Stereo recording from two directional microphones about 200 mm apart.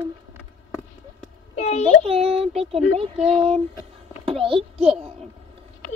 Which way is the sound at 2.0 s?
30° right (ahead or behind).